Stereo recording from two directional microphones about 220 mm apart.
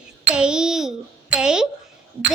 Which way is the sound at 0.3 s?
5° right (ahead or behind).